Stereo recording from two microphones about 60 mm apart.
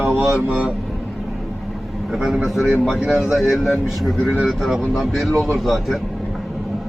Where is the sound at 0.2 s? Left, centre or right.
Right.